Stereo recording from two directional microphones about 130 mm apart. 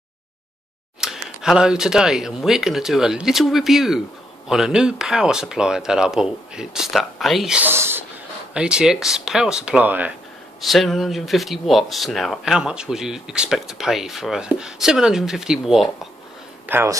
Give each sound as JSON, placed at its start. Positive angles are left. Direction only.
{"t": 1.0, "sound": "speech", "side_deg": -5}
{"t": 8.5, "sound": "speech", "side_deg": -5}
{"t": 10.6, "sound": "speech", "side_deg": 0}
{"t": 16.6, "sound": "speech", "side_deg": -15}